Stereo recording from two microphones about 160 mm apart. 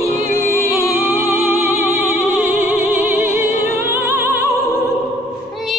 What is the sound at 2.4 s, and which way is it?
Music, 15° right (ahead or behind).